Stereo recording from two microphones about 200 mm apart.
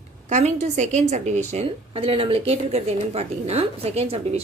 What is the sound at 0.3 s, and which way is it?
A woman's voice, 35° right (ahead or behind).